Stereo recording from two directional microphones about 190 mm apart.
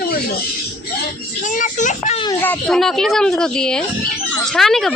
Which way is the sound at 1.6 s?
40° left (ahead or behind).